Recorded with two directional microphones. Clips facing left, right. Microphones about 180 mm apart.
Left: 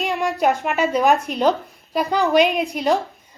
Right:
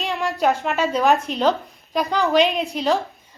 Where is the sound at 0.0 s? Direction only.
15° left (ahead or behind).